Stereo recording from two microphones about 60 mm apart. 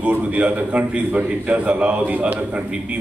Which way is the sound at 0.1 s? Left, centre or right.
Right.